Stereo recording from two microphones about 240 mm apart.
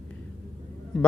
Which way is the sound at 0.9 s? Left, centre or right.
Centre.